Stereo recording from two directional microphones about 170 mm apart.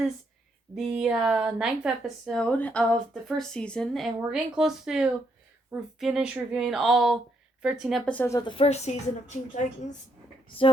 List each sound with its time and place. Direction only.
0.8 s a woman's voice: centre (ahead or behind); by 9.4 s 40° left (ahead or behind)